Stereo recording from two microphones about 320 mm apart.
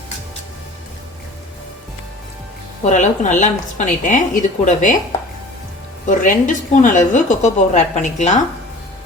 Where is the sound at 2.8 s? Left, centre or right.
Left.